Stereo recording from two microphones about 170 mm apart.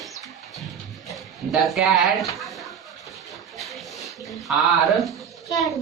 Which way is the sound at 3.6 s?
Centre (ahead or behind).